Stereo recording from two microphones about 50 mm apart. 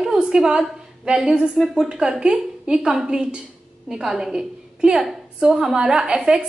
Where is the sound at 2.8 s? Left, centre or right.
Centre.